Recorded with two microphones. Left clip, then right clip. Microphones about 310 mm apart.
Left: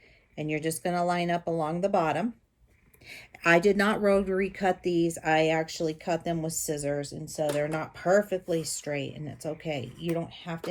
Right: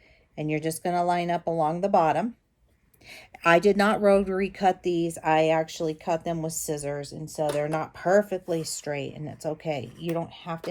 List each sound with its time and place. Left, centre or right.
0.3 s speech: centre